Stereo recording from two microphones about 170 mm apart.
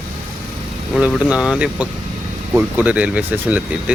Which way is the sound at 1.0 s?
5° right (ahead or behind).